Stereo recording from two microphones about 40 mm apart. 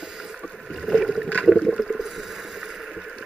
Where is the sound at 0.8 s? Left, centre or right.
Centre.